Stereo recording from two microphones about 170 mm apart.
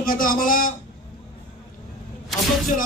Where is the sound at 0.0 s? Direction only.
55° left (ahead or behind).